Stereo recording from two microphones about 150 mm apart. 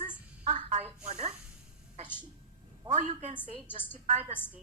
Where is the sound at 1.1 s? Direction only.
50° right (ahead or behind).